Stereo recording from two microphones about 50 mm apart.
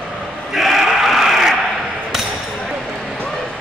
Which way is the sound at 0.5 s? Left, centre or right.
Centre.